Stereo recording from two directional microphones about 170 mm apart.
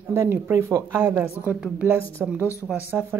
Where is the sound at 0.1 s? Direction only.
15° right (ahead or behind).